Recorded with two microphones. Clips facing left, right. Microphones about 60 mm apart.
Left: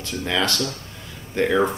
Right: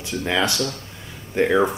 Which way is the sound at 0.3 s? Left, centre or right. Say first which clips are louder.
Right 1 dB; centre.